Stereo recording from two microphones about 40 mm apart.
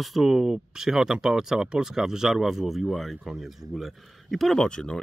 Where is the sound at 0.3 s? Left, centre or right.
Centre.